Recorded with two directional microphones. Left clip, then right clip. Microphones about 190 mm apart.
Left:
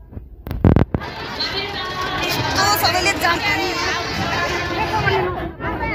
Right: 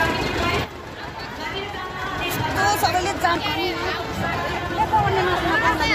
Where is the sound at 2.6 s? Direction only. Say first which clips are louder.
Left 3 dB; 30° right (ahead or behind).